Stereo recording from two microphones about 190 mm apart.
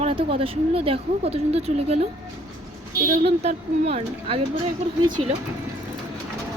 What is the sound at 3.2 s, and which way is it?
Speech, 35° right (ahead or behind).